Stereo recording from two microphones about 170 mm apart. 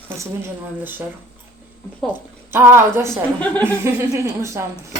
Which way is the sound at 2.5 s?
15° right (ahead or behind).